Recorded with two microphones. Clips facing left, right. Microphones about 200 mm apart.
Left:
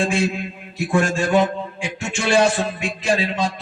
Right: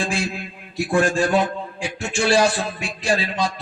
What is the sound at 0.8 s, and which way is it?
A man's voice, 35° right (ahead or behind).